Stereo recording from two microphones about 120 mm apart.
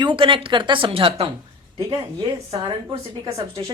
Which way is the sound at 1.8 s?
35° right (ahead or behind).